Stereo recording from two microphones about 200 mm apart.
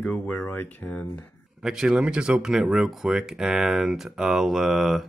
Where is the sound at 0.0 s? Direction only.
5° left (ahead or behind).